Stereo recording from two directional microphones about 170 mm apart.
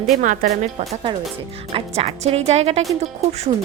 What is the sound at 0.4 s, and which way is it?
Speech, 50° right (ahead or behind).